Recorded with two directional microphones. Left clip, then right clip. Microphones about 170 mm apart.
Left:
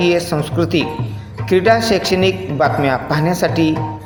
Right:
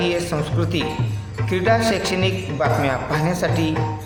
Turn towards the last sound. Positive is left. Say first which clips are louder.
# left 6 dB
turn(degrees=30)  # may be behind; listen again after turning